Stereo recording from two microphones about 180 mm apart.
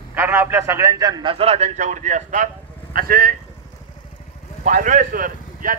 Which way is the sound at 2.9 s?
55° right (ahead or behind).